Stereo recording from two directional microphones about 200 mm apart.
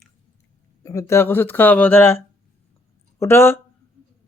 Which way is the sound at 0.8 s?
15° left (ahead or behind).